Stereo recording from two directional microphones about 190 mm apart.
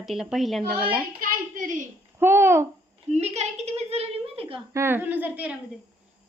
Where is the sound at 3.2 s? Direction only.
35° right (ahead or behind).